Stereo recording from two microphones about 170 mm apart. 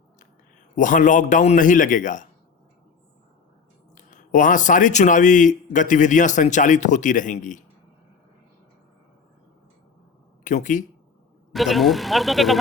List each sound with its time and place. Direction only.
0.8 s speech: 50° left (ahead or behind)
3.9 s speech: 50° left (ahead or behind)
10.4 s speech: 50° left (ahead or behind)
11.5 s speech: centre (ahead or behind)